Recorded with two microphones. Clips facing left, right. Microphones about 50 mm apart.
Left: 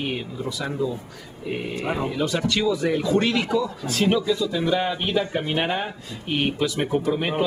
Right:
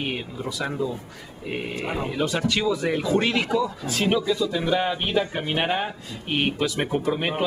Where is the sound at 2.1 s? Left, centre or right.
Centre.